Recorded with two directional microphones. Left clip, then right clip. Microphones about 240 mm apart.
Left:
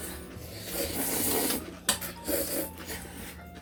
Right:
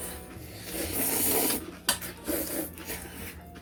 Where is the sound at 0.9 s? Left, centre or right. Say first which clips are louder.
Right 3 dB; right.